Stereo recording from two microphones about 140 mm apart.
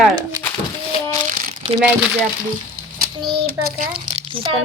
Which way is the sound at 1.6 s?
40° right (ahead or behind).